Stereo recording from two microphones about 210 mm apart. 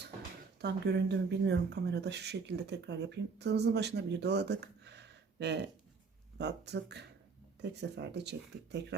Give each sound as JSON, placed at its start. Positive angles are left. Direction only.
{"t": 0.0, "sound": "speech", "side_deg": -50}